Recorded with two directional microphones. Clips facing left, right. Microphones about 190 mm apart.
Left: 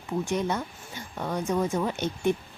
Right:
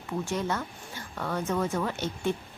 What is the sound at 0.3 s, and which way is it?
A woman's voice, 15° left (ahead or behind).